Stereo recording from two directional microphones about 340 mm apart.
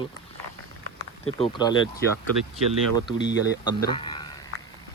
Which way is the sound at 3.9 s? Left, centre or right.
Centre.